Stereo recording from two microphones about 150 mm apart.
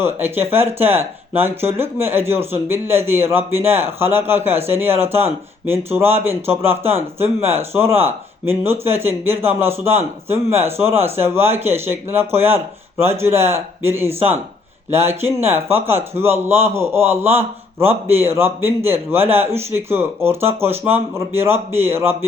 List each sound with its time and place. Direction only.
0.0 s speech: 15° right (ahead or behind)